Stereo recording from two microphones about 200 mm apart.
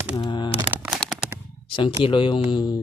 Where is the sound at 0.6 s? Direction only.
10° right (ahead or behind).